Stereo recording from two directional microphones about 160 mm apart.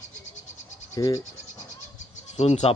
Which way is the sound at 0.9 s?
20° left (ahead or behind).